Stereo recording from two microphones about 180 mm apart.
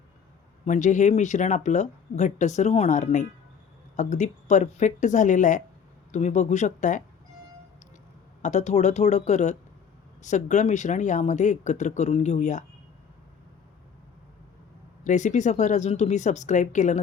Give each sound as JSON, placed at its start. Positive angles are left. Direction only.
{"t": 0.6, "sound": "speech", "side_deg": 40}
{"t": 8.4, "sound": "speech", "side_deg": 40}
{"t": 15.0, "sound": "speech", "side_deg": 40}